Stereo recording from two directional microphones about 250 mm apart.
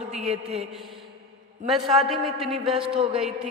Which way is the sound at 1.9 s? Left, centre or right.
Centre.